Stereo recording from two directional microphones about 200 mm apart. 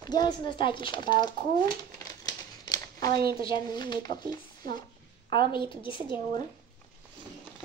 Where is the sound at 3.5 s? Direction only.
20° left (ahead or behind).